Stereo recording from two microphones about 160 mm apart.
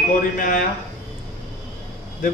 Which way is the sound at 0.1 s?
60° left (ahead or behind).